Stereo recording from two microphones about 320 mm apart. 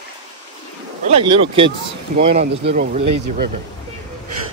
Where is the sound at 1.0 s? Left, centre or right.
Centre.